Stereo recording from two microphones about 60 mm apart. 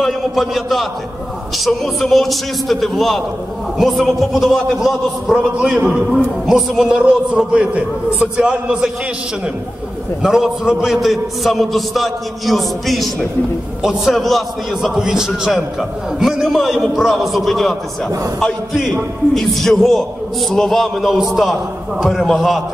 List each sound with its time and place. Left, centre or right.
0.0 s a man's voice: centre
10.2 s a man's voice: centre
15.0 s a man's voice: centre
19.3 s a man's voice: centre